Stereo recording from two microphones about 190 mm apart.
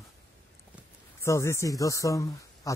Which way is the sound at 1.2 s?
15° left (ahead or behind).